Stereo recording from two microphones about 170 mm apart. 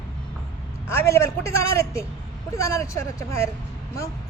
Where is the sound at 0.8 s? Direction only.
15° left (ahead or behind).